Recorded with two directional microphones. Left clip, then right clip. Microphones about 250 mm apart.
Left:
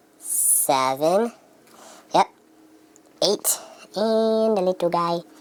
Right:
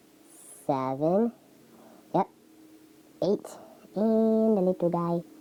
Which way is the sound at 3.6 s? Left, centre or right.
Centre.